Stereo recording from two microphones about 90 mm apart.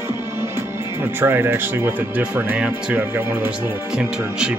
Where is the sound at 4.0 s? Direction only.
10° right (ahead or behind).